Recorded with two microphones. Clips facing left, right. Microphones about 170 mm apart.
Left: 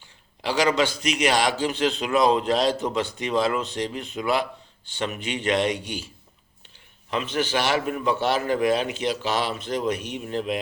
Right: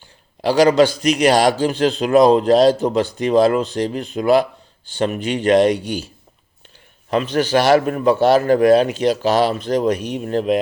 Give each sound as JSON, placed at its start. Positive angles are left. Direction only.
{"t": 0.4, "sound": "a man's voice", "side_deg": -35}
{"t": 7.1, "sound": "a man's voice", "side_deg": -40}